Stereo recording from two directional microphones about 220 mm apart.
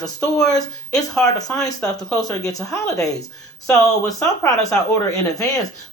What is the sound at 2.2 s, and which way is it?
Speech, 15° left (ahead or behind).